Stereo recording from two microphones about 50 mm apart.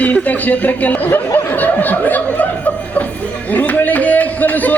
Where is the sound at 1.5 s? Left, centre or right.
Left.